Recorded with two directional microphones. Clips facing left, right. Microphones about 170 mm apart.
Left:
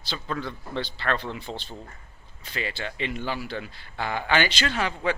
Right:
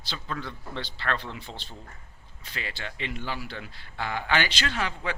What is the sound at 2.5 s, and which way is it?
Speech, 20° left (ahead or behind).